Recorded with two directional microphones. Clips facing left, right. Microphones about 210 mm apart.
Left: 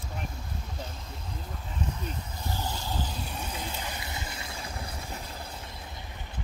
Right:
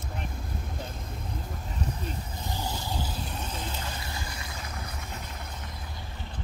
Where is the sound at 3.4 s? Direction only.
10° left (ahead or behind); by 5.7 s 30° left (ahead or behind).